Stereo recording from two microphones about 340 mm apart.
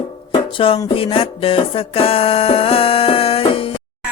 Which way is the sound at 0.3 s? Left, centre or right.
Centre.